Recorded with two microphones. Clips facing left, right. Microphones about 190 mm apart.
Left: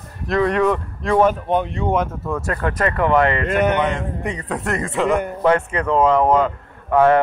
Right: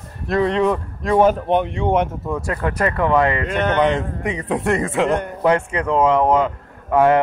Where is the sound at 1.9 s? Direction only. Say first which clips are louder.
Right 1 dB; 25° right (ahead or behind).